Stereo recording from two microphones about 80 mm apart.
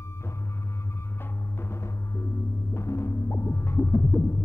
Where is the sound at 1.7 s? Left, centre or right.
Left.